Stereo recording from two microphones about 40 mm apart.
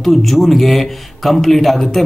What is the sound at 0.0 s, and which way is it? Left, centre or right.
A man's voice, centre.